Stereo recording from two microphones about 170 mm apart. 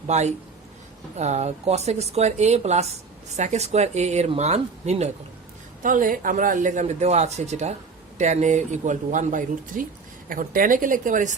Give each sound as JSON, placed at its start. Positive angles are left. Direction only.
{"t": 0.1, "sound": "speech", "side_deg": -40}
{"t": 5.8, "sound": "a man's voice", "side_deg": -50}